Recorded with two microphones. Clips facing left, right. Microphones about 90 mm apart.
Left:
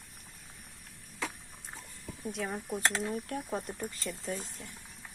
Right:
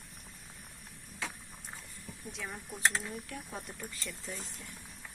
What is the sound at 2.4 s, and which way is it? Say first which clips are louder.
Speech: even; 35° left (ahead or behind).